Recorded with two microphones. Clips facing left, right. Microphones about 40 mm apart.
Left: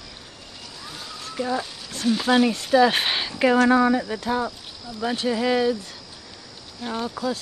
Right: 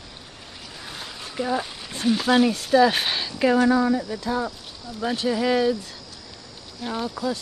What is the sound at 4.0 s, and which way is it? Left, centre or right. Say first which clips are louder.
Speech: left 2 dB; left.